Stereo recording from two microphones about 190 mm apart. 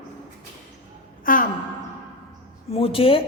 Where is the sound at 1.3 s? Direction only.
45° left (ahead or behind).